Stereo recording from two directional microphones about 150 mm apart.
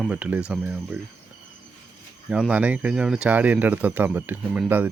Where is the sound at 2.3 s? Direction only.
5° right (ahead or behind).